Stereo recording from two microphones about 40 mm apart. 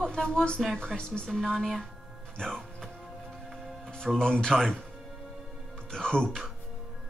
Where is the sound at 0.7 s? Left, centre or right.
Centre.